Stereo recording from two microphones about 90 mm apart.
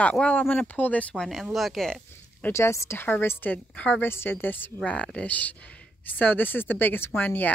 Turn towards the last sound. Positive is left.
turn(degrees=20)  # may be behind; listen again after turning